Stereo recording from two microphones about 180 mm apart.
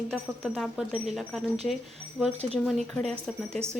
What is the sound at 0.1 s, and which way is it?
Speech, centre (ahead or behind).